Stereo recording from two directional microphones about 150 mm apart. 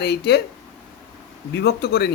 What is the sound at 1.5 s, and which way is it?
Speech, 90° left.